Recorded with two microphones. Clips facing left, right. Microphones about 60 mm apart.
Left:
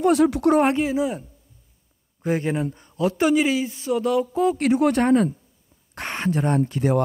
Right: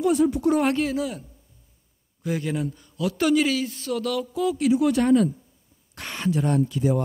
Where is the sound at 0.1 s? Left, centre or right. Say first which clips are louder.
Left 3 dB; left.